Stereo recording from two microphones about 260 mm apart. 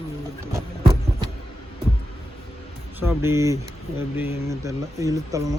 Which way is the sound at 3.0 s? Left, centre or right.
Centre.